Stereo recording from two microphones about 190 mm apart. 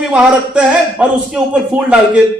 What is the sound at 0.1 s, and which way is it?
A man's voice, 5° right (ahead or behind).